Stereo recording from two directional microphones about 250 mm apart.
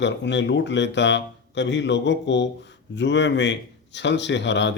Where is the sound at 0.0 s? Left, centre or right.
Left.